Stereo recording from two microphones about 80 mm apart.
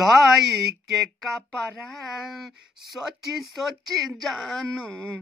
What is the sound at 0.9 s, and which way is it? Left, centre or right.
Speech, centre.